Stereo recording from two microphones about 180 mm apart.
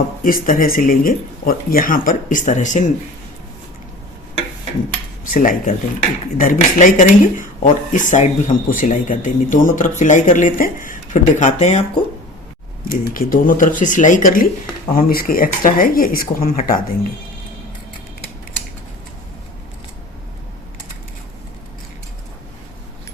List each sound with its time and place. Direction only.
0.2 s speech: 50° left (ahead or behind)
5.3 s speech: 45° left (ahead or behind)
12.9 s speech: 50° left (ahead or behind)